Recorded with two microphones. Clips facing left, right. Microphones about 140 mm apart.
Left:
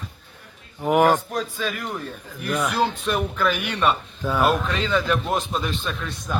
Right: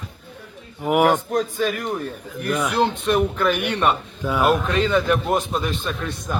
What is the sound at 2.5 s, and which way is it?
Speech, centre (ahead or behind).